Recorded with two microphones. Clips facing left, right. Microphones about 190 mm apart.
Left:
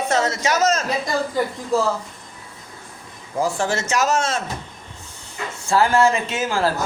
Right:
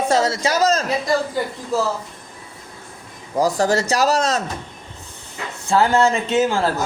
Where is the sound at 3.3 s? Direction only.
40° right (ahead or behind).